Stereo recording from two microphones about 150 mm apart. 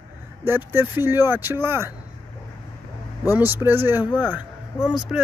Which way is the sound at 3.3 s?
15° right (ahead or behind).